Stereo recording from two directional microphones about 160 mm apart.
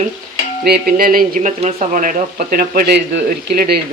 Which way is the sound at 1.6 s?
45° right (ahead or behind).